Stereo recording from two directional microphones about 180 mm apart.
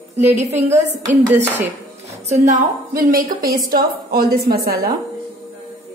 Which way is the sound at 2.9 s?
55° right (ahead or behind).